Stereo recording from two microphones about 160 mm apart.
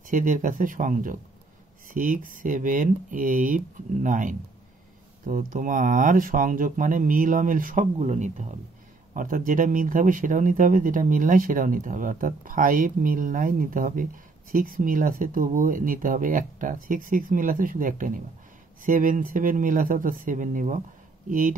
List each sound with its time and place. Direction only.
0.1 s speech: 55° right (ahead or behind)
9.1 s speech: 55° right (ahead or behind)